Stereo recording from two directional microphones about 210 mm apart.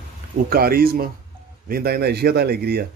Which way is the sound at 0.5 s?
45° right (ahead or behind).